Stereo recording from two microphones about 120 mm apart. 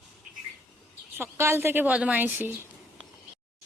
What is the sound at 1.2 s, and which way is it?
A woman's voice, 20° right (ahead or behind).